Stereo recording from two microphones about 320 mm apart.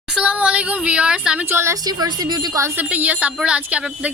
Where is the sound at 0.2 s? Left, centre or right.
Centre.